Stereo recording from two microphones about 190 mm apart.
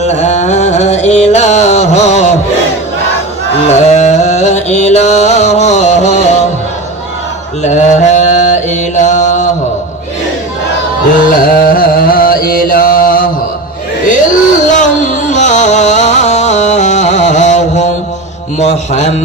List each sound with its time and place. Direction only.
0.0 s music: 35° left (ahead or behind)
3.6 s music: 35° left (ahead or behind)
7.6 s mantra: 40° left (ahead or behind)
11.2 s music: 50° left (ahead or behind)
18.6 s a sound: 35° left (ahead or behind)